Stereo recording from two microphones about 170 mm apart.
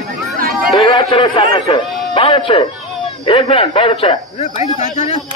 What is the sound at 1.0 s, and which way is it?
A man's voice, 30° left (ahead or behind).